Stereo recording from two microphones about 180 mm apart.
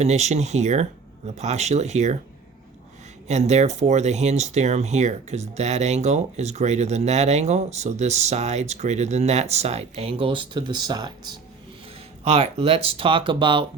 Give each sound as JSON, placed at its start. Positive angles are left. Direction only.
{"t": 0.0, "sound": "speech", "side_deg": -40}
{"t": 3.2, "sound": "speech", "side_deg": -40}
{"t": 12.2, "sound": "speech", "side_deg": -35}